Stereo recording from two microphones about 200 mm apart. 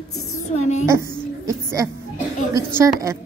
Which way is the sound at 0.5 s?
35° left (ahead or behind).